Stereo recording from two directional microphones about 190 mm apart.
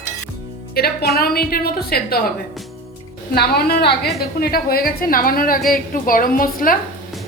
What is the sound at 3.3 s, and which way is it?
A woman's voice, 55° left (ahead or behind).